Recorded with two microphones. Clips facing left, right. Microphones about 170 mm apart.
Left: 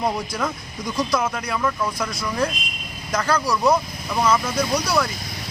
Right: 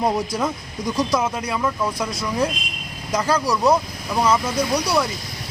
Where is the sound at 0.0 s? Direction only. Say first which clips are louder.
Right 3 dB; 20° right (ahead or behind).